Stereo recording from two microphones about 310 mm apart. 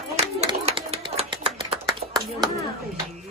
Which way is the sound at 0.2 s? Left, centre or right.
Centre.